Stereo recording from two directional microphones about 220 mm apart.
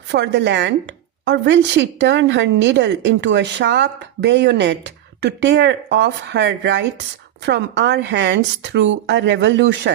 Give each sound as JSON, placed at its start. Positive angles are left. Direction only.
{"t": 0.1, "sound": "a woman's voice", "side_deg": -55}